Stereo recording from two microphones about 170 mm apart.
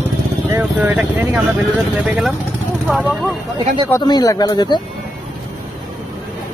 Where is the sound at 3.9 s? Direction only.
20° left (ahead or behind).